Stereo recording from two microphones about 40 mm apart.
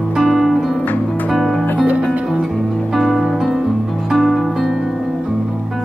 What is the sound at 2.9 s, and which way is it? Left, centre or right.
Music, centre.